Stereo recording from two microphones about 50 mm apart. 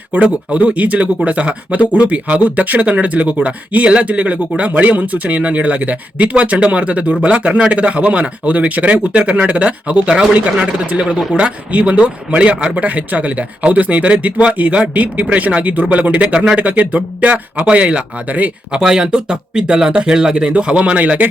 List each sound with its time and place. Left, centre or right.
0.1 s speech: right
18.7 s speech: centre; by 21.2 s right